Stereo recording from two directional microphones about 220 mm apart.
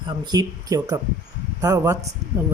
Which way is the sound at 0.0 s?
20° right (ahead or behind).